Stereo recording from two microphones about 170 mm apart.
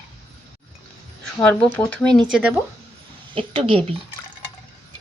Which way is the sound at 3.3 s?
30° right (ahead or behind).